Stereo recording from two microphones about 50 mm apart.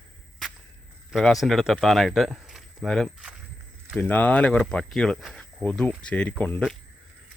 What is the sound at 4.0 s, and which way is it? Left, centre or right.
Speech, left.